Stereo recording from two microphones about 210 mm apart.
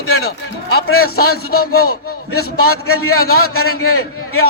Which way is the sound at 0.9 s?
85° left.